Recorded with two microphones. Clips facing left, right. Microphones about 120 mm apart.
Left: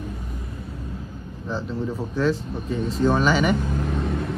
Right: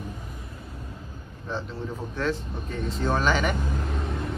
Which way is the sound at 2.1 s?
10° left (ahead or behind).